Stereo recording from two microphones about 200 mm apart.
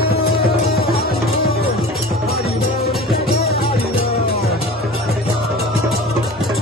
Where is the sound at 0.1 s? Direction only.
50° left (ahead or behind).